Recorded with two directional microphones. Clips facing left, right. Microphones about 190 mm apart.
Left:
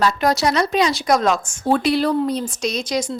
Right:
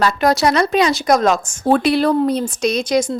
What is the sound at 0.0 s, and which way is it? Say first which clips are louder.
Speech: right 3 dB; 60° right (ahead or behind).